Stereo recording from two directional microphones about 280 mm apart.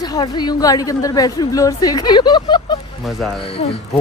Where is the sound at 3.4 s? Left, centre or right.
Centre.